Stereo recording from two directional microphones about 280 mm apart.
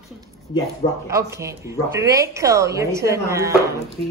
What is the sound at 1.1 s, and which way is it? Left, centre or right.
A woman's voice, centre.